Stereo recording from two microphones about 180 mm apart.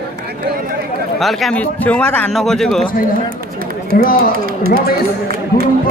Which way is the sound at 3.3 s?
55° right (ahead or behind).